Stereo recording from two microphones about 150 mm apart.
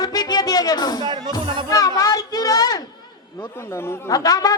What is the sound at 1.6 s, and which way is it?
Music, 25° left (ahead or behind).